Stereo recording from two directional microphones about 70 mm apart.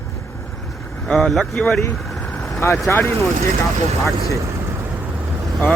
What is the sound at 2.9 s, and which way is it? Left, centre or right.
Speech, left.